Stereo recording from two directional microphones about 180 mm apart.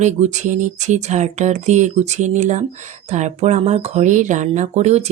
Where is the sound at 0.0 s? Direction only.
40° right (ahead or behind).